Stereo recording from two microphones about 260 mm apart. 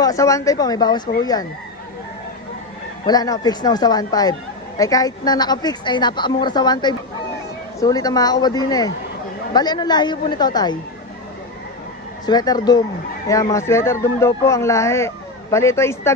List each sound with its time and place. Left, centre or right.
0.0 s speech: centre
3.1 s speech: centre
12.3 s speech: centre